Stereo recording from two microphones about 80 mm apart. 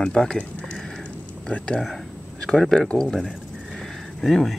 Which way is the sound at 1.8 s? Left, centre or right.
Centre.